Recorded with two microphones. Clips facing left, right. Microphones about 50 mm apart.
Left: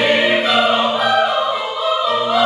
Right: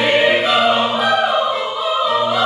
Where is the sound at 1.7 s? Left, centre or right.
Centre.